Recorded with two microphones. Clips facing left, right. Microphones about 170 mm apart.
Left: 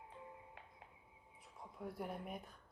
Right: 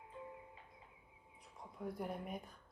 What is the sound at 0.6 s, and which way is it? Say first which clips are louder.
Music: left 1 dB; 75° left (ahead or behind).